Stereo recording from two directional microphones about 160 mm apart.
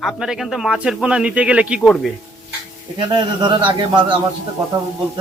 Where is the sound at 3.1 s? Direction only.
30° right (ahead or behind).